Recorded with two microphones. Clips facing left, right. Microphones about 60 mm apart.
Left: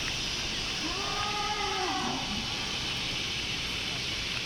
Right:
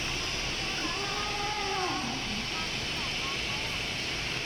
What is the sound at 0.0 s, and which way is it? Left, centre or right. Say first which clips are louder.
Cat: right 1 dB; right.